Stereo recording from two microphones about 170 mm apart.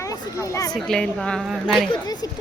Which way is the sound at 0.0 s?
20° left (ahead or behind).